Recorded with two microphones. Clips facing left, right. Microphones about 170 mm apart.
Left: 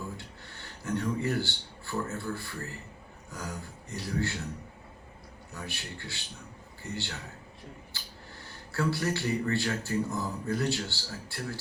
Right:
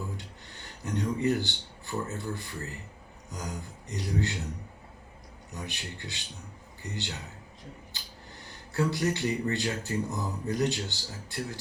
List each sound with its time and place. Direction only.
0.2 s speech: 20° right (ahead or behind)
5.5 s speech: 20° right (ahead or behind)
7.9 s a sound: 20° right (ahead or behind)
8.4 s speech: 20° right (ahead or behind)